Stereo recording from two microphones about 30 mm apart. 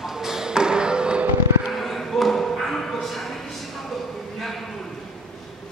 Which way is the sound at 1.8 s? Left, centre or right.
Centre.